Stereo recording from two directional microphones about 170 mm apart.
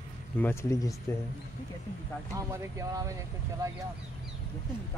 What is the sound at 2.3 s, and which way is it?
Speech, 20° right (ahead or behind).